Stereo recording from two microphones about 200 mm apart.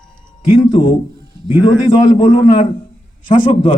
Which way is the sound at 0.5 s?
25° left (ahead or behind).